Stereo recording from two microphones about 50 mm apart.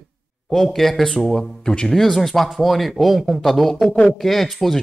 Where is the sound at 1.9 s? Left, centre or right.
Centre.